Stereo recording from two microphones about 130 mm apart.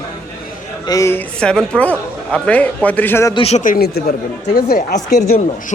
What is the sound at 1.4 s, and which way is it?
Speech, 5° left (ahead or behind).